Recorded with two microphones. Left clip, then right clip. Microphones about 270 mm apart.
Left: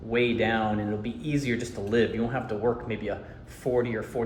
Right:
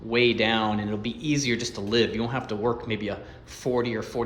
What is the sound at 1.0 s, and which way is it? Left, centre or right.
Speech, centre.